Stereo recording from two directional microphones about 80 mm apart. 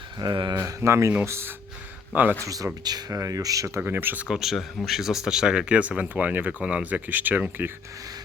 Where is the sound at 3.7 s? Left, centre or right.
Right.